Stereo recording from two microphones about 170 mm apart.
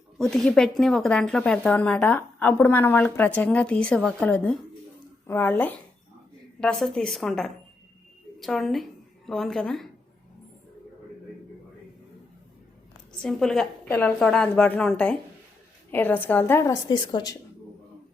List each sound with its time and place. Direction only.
0.2 s a woman's voice: 5° left (ahead or behind)
13.2 s a woman's voice: 5° left (ahead or behind)
16.9 s a woman's voice: 25° left (ahead or behind)